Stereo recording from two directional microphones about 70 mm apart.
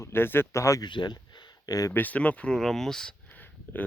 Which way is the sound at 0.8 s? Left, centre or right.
Left.